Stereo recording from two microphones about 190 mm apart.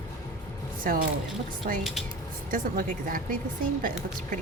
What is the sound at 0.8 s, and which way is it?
A woman's voice, 50° right (ahead or behind).